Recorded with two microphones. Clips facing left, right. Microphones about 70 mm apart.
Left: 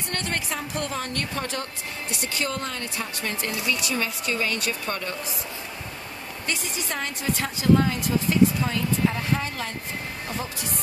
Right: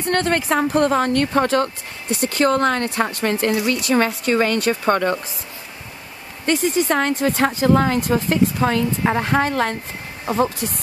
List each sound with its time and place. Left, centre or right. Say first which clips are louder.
0.1 s speech: right 12 dB; right
6.4 s speech: right 13 dB; right